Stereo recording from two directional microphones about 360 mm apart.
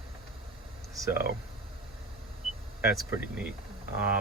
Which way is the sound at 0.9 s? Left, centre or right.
Centre.